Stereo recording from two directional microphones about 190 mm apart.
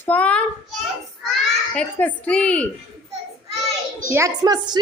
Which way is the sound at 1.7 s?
5° left (ahead or behind).